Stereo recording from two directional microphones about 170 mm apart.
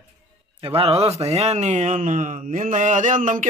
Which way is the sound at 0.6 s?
35° right (ahead or behind).